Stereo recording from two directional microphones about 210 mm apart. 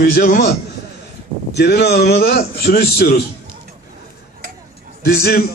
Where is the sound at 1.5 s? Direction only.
50° left (ahead or behind).